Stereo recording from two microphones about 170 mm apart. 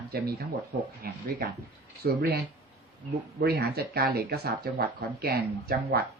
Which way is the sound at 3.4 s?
70° right (ahead or behind).